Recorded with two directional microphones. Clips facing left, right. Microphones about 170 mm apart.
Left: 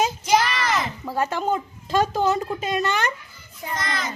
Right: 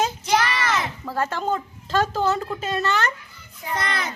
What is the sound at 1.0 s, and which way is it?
A woman's voice, 15° left (ahead or behind).